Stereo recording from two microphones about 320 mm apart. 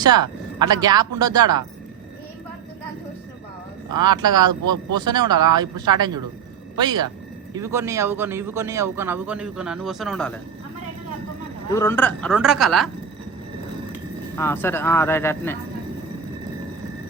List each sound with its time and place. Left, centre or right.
0.0 s a man's voice: centre
3.9 s a man's voice: centre
4.6 s speech: right
4.9 s a man's voice: centre
11.7 s a woman's voice: centre
14.3 s speech: centre